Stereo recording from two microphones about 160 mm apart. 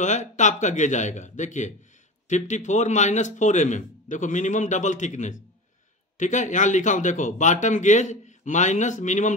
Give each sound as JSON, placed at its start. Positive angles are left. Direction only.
{"t": 0.0, "sound": "a man's voice", "side_deg": 50}